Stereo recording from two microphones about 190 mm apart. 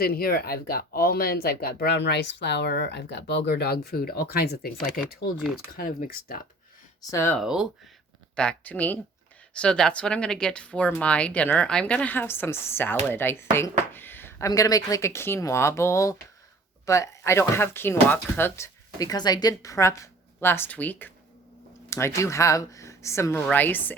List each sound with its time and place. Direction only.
0.0 s speech: 50° left (ahead or behind)
7.1 s speech: 15° left (ahead or behind)
7.3 s speech: 5° right (ahead or behind)